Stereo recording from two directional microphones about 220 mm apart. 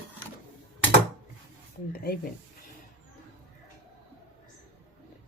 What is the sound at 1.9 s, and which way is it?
Speech, 45° left (ahead or behind).